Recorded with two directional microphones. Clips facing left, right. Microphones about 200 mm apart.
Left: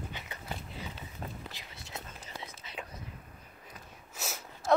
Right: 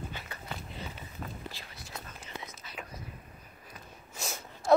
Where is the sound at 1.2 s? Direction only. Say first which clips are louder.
Even; 35° left (ahead or behind).